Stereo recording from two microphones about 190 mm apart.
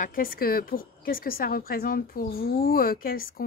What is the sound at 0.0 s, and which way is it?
A woman's voice, 50° left (ahead or behind).